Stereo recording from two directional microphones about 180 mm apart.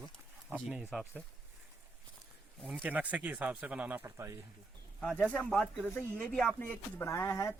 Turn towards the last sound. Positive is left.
turn(degrees=15)  # may be behind; listen again after turning